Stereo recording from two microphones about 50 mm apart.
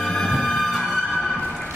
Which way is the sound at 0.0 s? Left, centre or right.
Centre.